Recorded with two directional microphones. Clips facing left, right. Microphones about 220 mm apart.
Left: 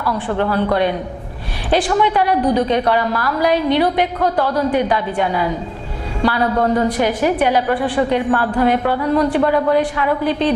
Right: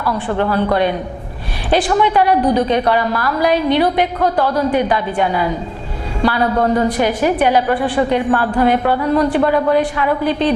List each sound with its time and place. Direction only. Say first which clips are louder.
0.0 s a woman's voice: right 1 dB; 25° right (ahead or behind)
4.2 s a woman's voice: right 1 dB; 25° right (ahead or behind)